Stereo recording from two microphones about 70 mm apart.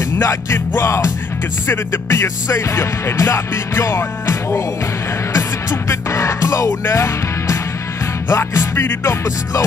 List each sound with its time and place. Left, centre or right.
0.2 s music: left